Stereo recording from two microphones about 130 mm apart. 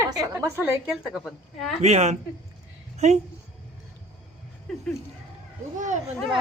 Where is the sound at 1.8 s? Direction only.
60° right (ahead or behind).